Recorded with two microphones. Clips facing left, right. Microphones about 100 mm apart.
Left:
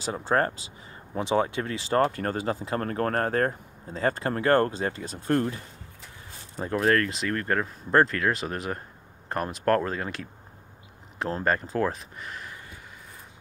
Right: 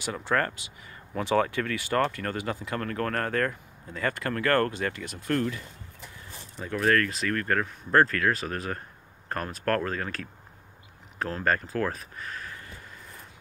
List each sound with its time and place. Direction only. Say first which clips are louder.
0.0 s speech: left 3 dB; 30° left (ahead or behind)